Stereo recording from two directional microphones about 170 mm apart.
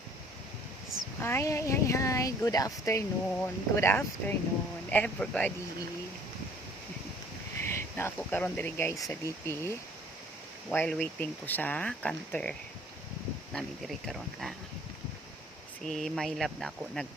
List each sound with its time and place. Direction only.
1.2 s speech: 15° left (ahead or behind)
7.6 s speech: 15° left (ahead or behind)
15.9 s speech: centre (ahead or behind)